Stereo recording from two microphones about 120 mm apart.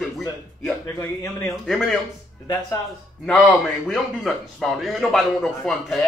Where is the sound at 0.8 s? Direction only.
20° left (ahead or behind).